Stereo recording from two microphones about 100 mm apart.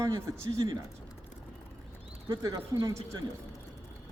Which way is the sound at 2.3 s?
40° right (ahead or behind).